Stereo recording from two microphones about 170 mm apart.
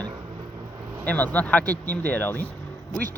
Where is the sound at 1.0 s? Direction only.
10° left (ahead or behind).